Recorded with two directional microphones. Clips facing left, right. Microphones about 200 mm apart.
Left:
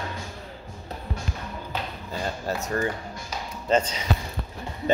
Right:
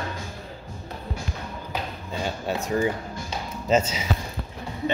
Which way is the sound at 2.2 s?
Centre (ahead or behind).